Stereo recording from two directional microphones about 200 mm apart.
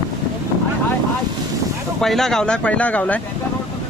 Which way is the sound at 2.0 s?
Centre (ahead or behind).